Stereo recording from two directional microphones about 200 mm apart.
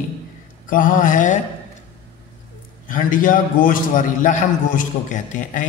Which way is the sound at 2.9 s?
45° left (ahead or behind).